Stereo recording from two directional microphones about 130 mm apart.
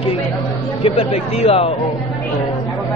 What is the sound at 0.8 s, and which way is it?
Speech, 50° left (ahead or behind).